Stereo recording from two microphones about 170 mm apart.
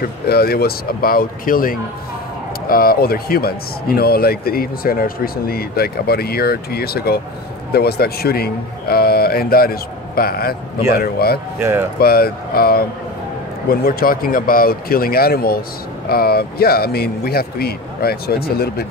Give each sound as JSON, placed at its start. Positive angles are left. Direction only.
{"t": 0.0, "sound": "a man's voice", "side_deg": 65}
{"t": 11.6, "sound": "speech", "side_deg": -15}
{"t": 12.0, "sound": "a man's voice", "side_deg": 65}